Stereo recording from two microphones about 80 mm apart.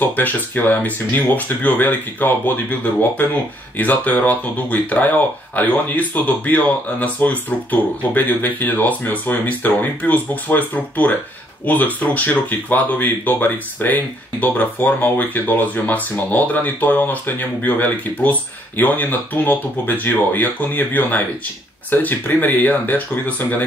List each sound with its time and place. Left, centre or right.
0.0 s speech: left